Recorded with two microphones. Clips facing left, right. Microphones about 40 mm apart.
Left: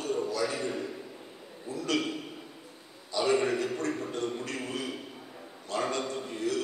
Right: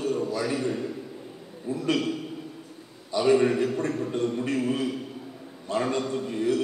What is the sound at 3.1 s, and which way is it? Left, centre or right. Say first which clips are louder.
Speech: right 6 dB; centre.